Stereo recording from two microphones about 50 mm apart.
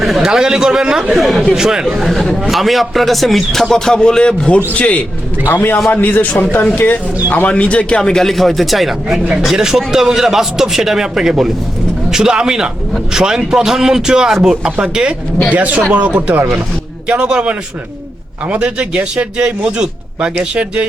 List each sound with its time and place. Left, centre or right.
0.2 s a man's voice: centre
1.1 s a man's voice: centre
1.5 s a man's voice: centre
2.0 s a man's voice: centre
3.9 s a man's voice: centre
5.5 s a man's voice: left
7.4 s a man's voice: left
8.1 s a man's voice: centre
15.4 s speech: right
17.1 s a man's voice: centre